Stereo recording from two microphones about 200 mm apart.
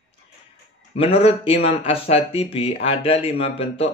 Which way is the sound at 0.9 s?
30° left (ahead or behind).